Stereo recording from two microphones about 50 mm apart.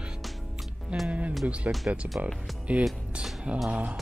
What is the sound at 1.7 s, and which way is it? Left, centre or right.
Speech, right.